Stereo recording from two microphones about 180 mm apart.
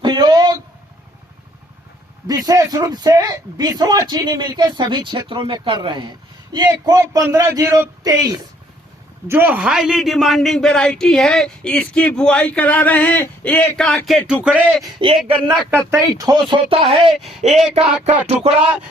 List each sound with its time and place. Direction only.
0.0 s a sound: 20° right (ahead or behind)
2.2 s a man's voice: 20° right (ahead or behind); by 15.4 s centre (ahead or behind)
15.9 s a man's voice: 20° right (ahead or behind)
16.5 s speech: 30° right (ahead or behind)
17.1 s a man's voice: centre (ahead or behind)
17.7 s speech: 35° right (ahead or behind)